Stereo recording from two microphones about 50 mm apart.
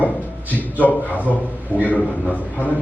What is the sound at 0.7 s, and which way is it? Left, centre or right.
A man's voice, left.